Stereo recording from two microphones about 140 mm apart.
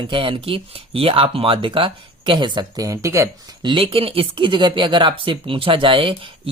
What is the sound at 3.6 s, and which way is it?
Speech, 40° right (ahead or behind).